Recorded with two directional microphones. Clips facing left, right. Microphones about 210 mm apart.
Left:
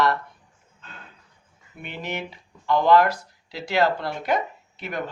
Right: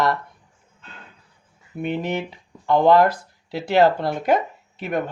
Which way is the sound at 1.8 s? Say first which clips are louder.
Right 8 dB; 30° right (ahead or behind).